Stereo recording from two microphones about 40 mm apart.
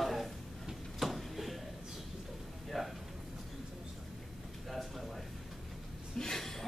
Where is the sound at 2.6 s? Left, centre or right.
Centre.